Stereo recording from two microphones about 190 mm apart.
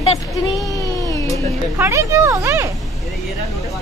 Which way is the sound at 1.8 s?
15° right (ahead or behind).